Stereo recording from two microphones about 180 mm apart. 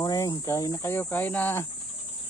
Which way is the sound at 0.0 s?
20° left (ahead or behind).